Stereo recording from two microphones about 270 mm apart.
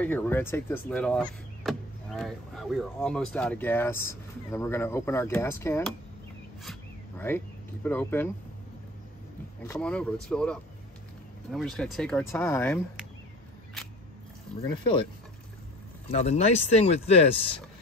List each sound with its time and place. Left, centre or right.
0.0 s speech: centre
9.7 s speech: centre
14.6 s speech: centre
16.1 s speech: left